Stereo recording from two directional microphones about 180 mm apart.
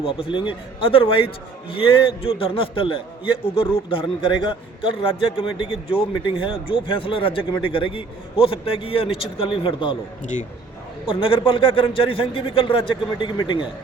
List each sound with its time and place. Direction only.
0.0 s speech: 30° left (ahead or behind)
11.0 s speech: 30° left (ahead or behind)